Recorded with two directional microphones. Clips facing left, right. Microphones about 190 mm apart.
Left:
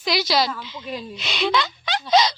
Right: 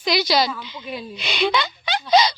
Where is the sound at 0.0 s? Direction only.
Centre (ahead or behind).